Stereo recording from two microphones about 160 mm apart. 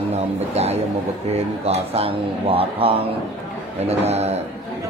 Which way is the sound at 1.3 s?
40° right (ahead or behind).